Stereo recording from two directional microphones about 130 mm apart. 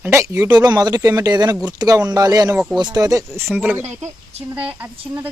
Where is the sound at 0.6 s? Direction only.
30° right (ahead or behind).